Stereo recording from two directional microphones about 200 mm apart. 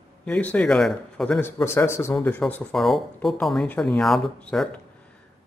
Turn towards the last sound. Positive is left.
turn(degrees=5)  # may be behind; listen again after turning